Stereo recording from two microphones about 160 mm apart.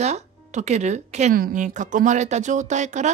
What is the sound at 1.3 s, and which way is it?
Speech, 60° right (ahead or behind).